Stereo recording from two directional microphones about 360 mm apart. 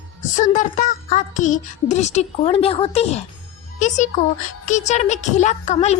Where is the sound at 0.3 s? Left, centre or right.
Left.